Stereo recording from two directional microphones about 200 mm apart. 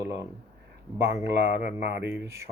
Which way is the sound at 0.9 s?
55° right (ahead or behind).